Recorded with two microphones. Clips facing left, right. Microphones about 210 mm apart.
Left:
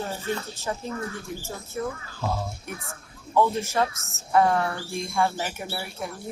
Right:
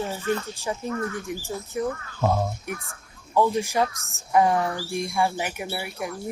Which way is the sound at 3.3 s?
15° right (ahead or behind).